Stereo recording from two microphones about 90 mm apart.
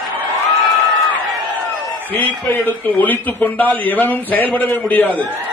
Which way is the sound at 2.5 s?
20° left (ahead or behind).